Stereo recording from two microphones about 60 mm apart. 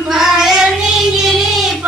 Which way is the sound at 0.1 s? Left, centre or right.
Centre.